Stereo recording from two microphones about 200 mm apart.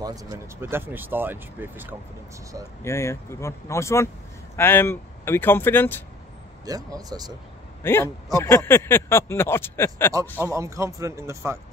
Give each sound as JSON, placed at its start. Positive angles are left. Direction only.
{"t": 0.0, "sound": "speech", "side_deg": -15}
{"t": 2.8, "sound": "speech", "side_deg": 15}
{"t": 6.6, "sound": "speech", "side_deg": -15}
{"t": 7.8, "sound": "a man's voice", "side_deg": 10}
{"t": 10.4, "sound": "speech", "side_deg": -15}